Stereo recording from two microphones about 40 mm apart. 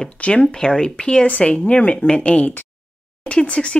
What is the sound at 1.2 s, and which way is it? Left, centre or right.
Speech, left.